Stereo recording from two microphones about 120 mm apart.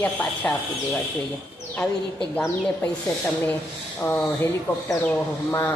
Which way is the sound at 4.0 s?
15° left (ahead or behind).